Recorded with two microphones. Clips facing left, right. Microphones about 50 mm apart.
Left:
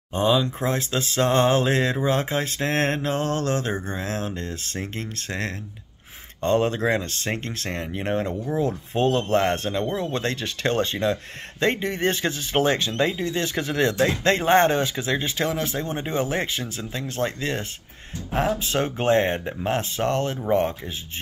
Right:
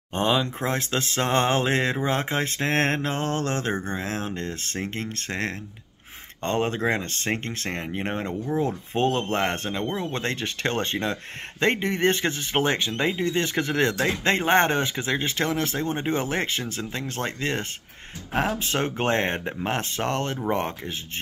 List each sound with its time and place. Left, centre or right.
0.1 s speech: right
14.0 s speech: right